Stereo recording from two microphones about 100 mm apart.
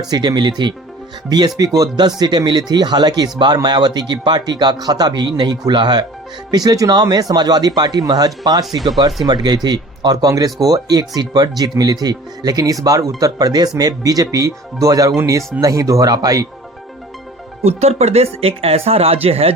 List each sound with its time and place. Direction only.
0.0 s speech: 45° right (ahead or behind)
17.6 s speech: 90° right